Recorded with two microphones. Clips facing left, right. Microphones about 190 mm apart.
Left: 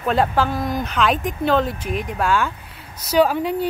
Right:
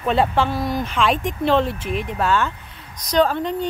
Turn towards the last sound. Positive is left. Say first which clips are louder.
# left 1 dB
turn(degrees=10)  # may be behind; listen again after turning